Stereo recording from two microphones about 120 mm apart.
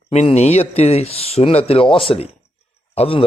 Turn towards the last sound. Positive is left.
turn(degrees=55)  # may be behind; listen again after turning